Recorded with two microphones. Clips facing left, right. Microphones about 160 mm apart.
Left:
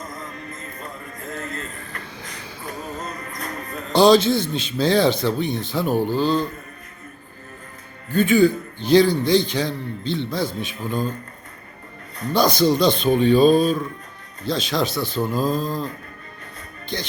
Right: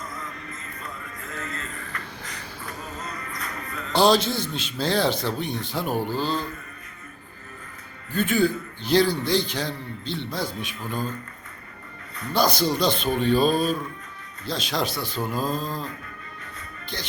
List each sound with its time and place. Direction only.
0.1 s music: 40° left (ahead or behind)
3.0 s music: 40° left (ahead or behind)
4.0 s a man's voice: 10° right (ahead or behind)
8.1 s a man's voice: 5° right (ahead or behind)
12.3 s a man's voice: 10° right (ahead or behind)
15.5 s music: 30° right (ahead or behind)